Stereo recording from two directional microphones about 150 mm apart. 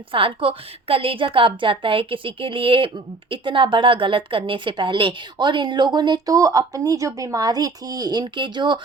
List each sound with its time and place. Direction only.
0.1 s a woman's voice: 35° right (ahead or behind)